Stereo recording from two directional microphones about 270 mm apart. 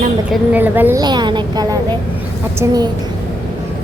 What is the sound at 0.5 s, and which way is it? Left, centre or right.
A woman's voice, centre.